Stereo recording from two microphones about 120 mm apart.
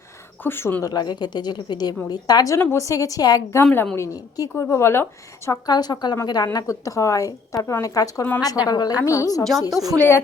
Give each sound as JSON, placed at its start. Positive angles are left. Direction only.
{"t": 0.4, "sound": "a woman's voice", "side_deg": 20}
{"t": 3.7, "sound": "a woman's voice", "side_deg": 10}
{"t": 3.9, "sound": "a woman's voice", "side_deg": 30}
{"t": 5.5, "sound": "a woman's voice", "side_deg": 35}
{"t": 9.4, "sound": "a woman's voice", "side_deg": 5}